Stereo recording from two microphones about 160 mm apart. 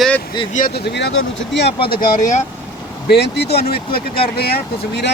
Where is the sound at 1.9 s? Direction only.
60° left (ahead or behind).